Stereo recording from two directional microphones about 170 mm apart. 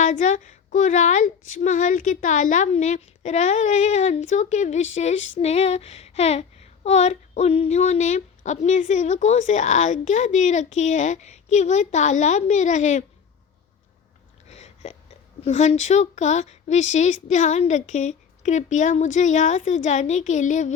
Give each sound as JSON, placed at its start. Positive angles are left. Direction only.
{"t": 0.0, "sound": "speech", "side_deg": 45}
{"t": 14.5, "sound": "a sound", "side_deg": 40}
{"t": 15.4, "sound": "speech", "side_deg": 40}